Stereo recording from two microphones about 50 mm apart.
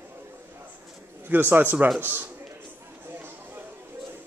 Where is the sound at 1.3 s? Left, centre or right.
Right.